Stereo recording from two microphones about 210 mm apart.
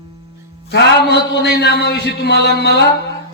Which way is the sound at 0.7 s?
55° left (ahead or behind).